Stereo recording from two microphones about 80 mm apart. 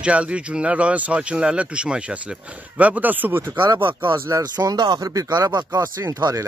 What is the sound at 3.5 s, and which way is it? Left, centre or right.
Speech, right.